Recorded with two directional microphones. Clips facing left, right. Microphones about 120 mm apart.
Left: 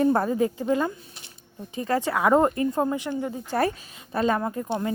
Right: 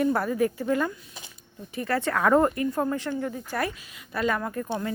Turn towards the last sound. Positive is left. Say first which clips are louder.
# left 2 dB
turn(degrees=25)  # may be behind; listen again after turning